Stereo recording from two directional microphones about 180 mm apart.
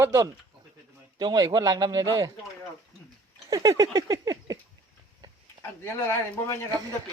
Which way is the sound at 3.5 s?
20° right (ahead or behind).